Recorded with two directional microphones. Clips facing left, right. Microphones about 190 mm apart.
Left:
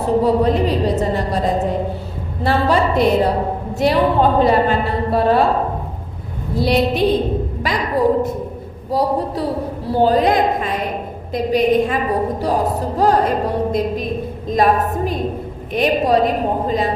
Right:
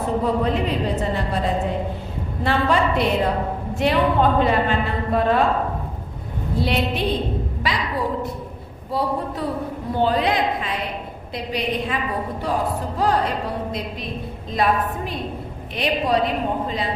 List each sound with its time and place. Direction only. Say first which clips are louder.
0.2 s a woman's voice: left 6 dB; 35° left (ahead or behind)